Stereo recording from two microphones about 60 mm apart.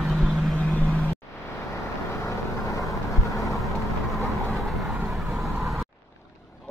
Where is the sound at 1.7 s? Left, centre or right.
Left.